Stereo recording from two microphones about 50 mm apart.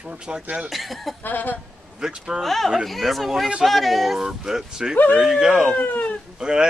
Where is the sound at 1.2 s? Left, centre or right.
Left.